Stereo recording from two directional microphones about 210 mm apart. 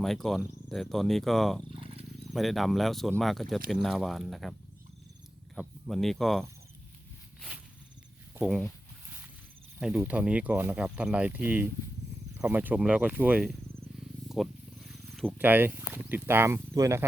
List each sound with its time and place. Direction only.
0.0 s speech: centre (ahead or behind)
1.7 s wild animals: 25° right (ahead or behind)
2.3 s speech: centre (ahead or behind)
5.5 s speech: centre (ahead or behind)
8.4 s speech: centre (ahead or behind)
9.8 s speech: 5° right (ahead or behind)
14.8 s wild animals: centre (ahead or behind)
15.4 s speech: 10° right (ahead or behind)